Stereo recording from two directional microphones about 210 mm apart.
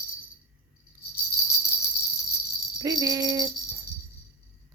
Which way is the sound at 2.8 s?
15° right (ahead or behind).